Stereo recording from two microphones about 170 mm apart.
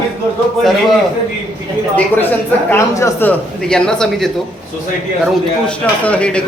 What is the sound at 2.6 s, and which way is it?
A man's voice, 15° left (ahead or behind).